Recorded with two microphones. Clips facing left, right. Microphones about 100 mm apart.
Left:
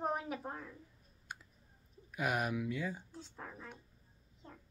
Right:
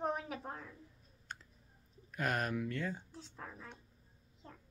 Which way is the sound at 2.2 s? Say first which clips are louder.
Left 1 dB; 10° left (ahead or behind).